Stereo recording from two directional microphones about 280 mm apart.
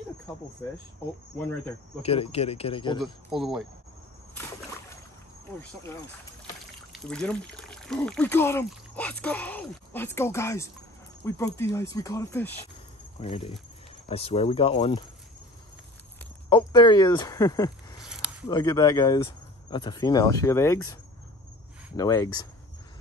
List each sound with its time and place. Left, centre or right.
2.0 s speech: left
3.0 s speech: centre
5.6 s speech: centre
13.2 s speech: centre
16.4 s speech: centre
18.0 s a sound: centre
18.5 s speech: centre